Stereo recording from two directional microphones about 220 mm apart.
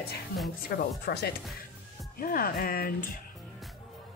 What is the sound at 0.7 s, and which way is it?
Speech, 45° left (ahead or behind).